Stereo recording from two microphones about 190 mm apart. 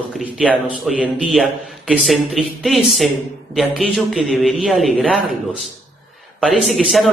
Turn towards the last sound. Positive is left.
turn(degrees=0)  # may be behind; listen again after turning